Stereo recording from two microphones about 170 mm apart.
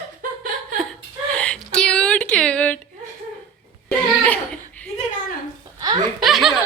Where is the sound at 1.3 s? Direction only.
5° left (ahead or behind).